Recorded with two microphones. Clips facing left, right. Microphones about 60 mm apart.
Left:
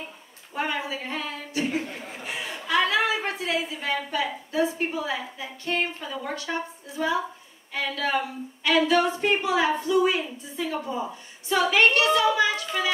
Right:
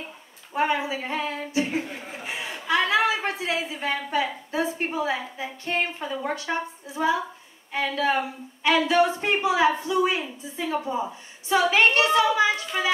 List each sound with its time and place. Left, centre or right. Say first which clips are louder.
0.5 s a woman's voice: right 4 dB; right
4.1 s a woman's voice: right 2 dB; right